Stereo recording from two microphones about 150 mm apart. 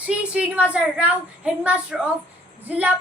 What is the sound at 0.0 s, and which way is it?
A woman's voice, 10° right (ahead or behind).